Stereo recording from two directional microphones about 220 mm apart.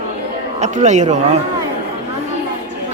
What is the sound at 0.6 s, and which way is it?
Speech, 30° right (ahead or behind).